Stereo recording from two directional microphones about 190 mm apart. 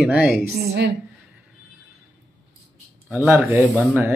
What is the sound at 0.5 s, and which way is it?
Speech, 65° right (ahead or behind).